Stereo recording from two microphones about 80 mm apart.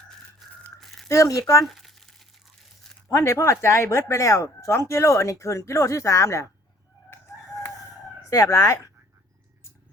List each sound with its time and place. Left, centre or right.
0.4 s a sound: centre
1.0 s speech: left
1.6 s crumpling: centre
3.1 s speech: left
7.1 s chicken: left
8.3 s speech: left